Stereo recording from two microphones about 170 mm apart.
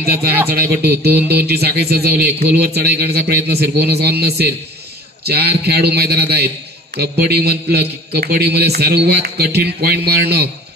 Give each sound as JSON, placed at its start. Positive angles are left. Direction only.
{"t": 0.5, "sound": "a man's voice", "side_deg": -70}
{"t": 1.1, "sound": "speech", "side_deg": -10}
{"t": 1.4, "sound": "a man's voice", "side_deg": -70}